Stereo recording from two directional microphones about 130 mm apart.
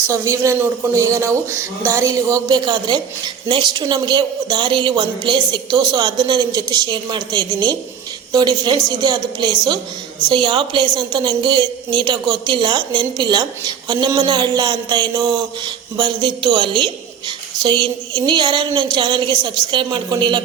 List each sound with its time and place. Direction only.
0.1 s a man's voice: 25° right (ahead or behind)